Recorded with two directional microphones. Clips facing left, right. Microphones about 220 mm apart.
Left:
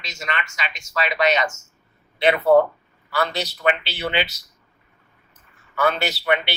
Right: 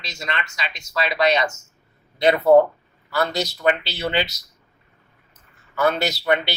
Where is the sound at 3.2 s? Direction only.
45° right (ahead or behind).